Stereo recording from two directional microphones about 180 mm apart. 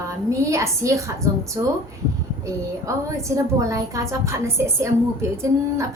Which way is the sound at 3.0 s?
15° right (ahead or behind).